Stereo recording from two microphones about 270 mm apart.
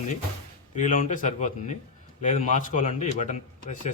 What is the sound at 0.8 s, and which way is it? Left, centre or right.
A man's voice, left.